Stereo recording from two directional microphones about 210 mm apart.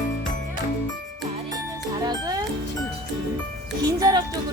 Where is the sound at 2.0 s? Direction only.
20° right (ahead or behind).